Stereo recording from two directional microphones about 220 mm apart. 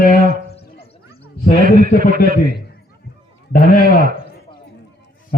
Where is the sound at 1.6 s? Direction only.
40° right (ahead or behind).